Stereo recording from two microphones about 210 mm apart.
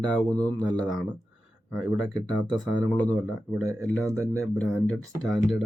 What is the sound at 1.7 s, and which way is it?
Speech, centre (ahead or behind).